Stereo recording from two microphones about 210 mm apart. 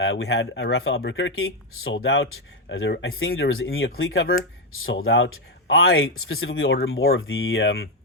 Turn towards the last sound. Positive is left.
turn(degrees=60)  # may be behind; listen again after turning